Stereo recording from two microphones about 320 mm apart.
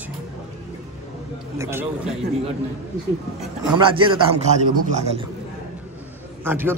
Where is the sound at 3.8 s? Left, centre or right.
Centre.